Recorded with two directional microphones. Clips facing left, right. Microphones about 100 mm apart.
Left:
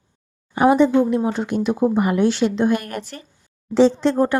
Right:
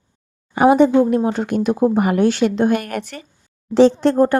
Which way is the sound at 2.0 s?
55° right (ahead or behind).